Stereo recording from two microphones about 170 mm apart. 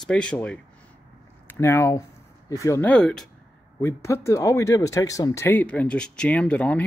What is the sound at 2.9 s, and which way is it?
Speech, 5° left (ahead or behind).